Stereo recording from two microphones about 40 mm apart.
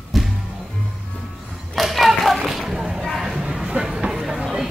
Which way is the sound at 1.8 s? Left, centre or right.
Centre.